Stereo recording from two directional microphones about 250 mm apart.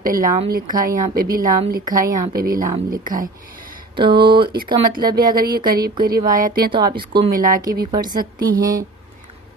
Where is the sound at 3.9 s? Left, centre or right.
Centre.